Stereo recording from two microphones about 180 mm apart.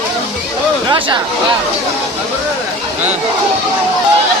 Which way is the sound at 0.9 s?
30° right (ahead or behind).